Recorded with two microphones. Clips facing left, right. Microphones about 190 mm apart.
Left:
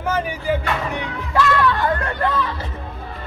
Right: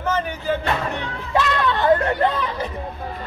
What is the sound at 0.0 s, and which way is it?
Speech, 10° left (ahead or behind).